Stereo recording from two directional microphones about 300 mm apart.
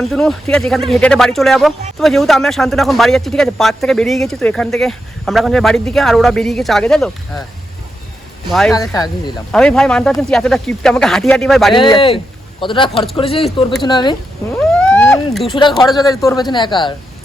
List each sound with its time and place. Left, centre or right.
0.0 s a man's voice: centre
8.7 s a man's voice: centre
11.7 s speech: centre
14.8 s a sound: centre
15.7 s a man's voice: centre
16.0 s speech: centre